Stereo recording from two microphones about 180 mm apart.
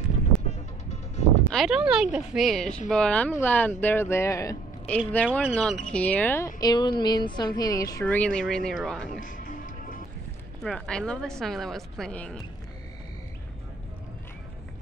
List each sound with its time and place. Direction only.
1.5 s speech: centre (ahead or behind); by 8.0 s 20° left (ahead or behind)
8.0 s speech: 5° left (ahead or behind)
9.2 s music: 45° left (ahead or behind)
10.6 s speech: 5° left (ahead or behind)